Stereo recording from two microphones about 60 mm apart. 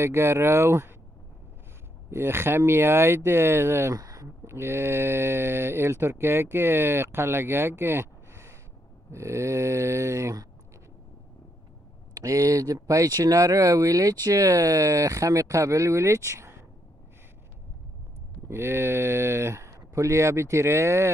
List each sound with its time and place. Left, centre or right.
0.0 s speech: right
2.0 s speech: right
3.9 s speech: right
4.5 s speech: right
12.2 s speech: right
18.5 s speech: right